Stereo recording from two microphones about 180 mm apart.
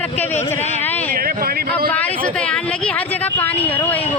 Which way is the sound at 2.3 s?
5° left (ahead or behind).